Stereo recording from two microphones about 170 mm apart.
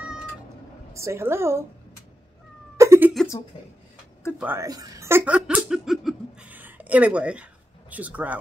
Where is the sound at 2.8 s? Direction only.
15° right (ahead or behind).